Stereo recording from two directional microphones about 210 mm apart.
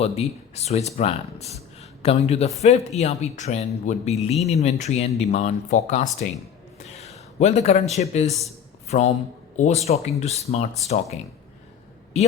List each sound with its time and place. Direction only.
0.0 s speech: 30° left (ahead or behind)
6.7 s a sound: 30° left (ahead or behind)
8.9 s speech: 35° left (ahead or behind)